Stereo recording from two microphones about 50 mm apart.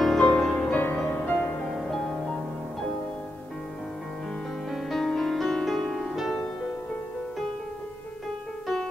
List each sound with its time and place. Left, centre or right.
0.0 s music: centre
0.7 s music: left
1.1 s music: left
4.6 s music: centre